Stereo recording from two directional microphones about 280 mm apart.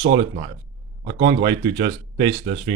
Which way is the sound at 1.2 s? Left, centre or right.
Centre.